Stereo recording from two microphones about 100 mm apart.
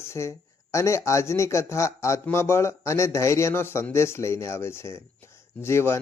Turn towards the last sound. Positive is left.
turn(degrees=25)  # may be behind; listen again after turning